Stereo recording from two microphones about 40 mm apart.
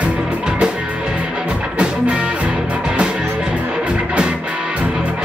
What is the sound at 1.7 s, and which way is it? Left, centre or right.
Music, right.